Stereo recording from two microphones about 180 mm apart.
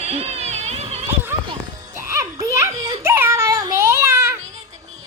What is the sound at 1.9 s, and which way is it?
Children playing, 15° right (ahead or behind).